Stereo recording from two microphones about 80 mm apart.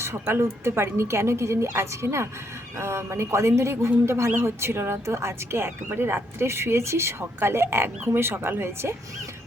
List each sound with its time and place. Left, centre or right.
0.0 s speech: right